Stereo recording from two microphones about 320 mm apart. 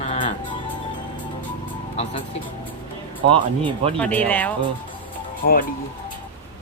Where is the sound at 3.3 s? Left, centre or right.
Centre.